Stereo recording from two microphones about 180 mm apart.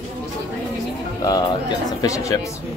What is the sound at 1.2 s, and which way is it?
Speech, 20° left (ahead or behind).